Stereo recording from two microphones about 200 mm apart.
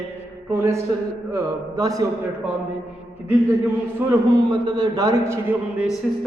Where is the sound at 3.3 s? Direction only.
10° right (ahead or behind).